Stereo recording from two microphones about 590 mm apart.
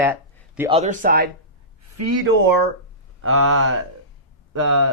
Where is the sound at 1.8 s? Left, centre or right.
Right.